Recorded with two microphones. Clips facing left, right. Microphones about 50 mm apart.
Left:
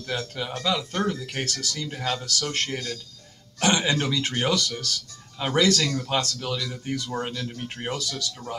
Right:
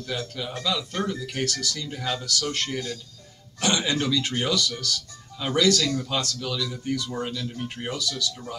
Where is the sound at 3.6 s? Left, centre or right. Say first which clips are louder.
Left 2 dB; left.